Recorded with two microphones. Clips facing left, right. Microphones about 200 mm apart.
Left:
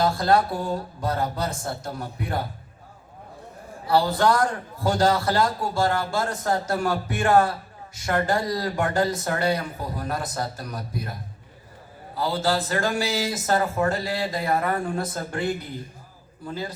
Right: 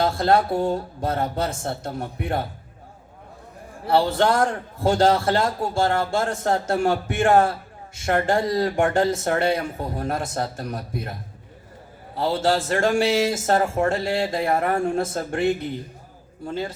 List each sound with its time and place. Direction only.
0.0 s a man's voice: 25° right (ahead or behind)
3.8 s a man's voice: 25° right (ahead or behind)